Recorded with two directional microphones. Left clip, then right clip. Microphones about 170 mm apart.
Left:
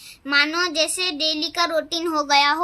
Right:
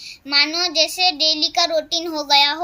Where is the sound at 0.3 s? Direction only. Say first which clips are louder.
Right 1 dB; 45° left (ahead or behind).